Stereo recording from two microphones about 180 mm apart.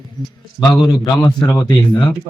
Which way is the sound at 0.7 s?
20° left (ahead or behind).